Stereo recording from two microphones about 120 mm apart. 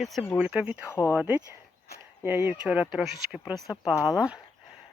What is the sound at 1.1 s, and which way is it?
Speech, 15° right (ahead or behind).